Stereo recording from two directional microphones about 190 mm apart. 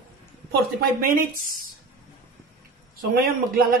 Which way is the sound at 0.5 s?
50° right (ahead or behind).